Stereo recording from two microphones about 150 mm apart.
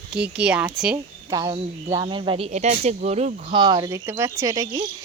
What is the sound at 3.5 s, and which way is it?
Speech, 30° right (ahead or behind).